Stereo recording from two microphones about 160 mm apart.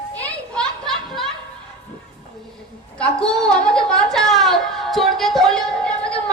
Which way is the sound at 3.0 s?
5° left (ahead or behind).